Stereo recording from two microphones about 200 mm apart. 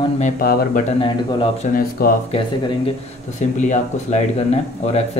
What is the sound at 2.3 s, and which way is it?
Speech, 30° left (ahead or behind).